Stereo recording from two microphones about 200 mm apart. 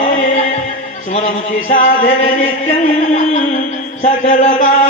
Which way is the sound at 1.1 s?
35° left (ahead or behind).